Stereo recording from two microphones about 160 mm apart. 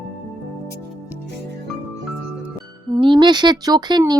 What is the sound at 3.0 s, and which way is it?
Speech, 30° right (ahead or behind).